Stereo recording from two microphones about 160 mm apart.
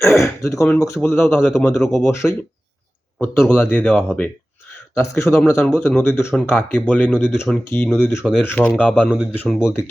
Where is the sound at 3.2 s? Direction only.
15° left (ahead or behind).